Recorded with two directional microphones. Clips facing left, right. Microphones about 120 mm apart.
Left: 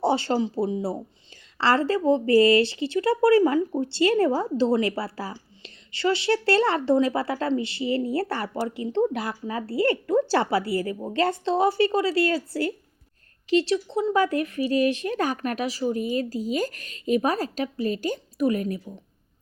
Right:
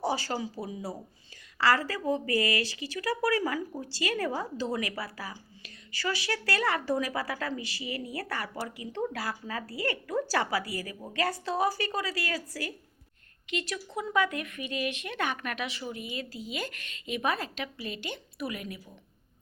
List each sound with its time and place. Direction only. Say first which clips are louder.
0.0 s speech: left 8 dB; 25° left (ahead or behind)